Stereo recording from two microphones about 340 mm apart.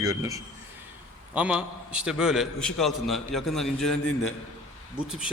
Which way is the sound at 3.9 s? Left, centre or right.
Left.